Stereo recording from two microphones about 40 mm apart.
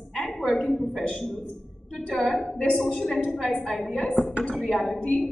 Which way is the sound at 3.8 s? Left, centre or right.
Left.